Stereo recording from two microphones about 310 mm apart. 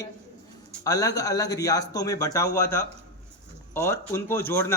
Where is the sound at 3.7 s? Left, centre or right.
Centre.